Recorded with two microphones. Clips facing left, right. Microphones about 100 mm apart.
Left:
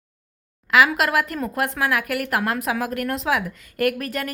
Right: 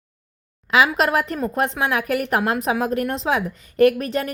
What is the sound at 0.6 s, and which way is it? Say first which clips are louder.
A woman's voice: even; 25° right (ahead or behind).